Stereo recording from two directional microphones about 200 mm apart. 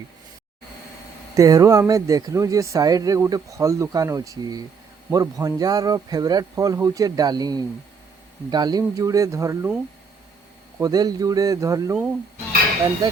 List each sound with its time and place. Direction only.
1.4 s speech: 15° right (ahead or behind)
10.8 s speech: 20° right (ahead or behind)